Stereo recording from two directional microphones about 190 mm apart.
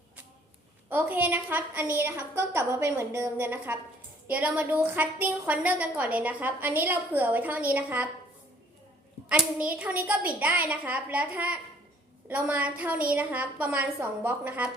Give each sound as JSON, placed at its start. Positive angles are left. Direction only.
{"t": 0.9, "sound": "a woman's voice", "side_deg": -10}
{"t": 9.4, "sound": "a woman's voice", "side_deg": -5}